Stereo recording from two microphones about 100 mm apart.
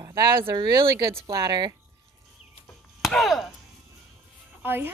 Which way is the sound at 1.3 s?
40° right (ahead or behind).